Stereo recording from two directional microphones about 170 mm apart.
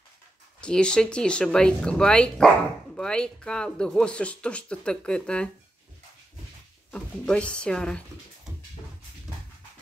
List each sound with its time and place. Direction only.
0.6 s speech: 5° left (ahead or behind)
6.9 s speech: 5° left (ahead or behind)